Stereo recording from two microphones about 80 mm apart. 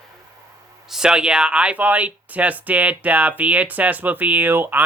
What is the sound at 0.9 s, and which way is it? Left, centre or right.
Speech, centre.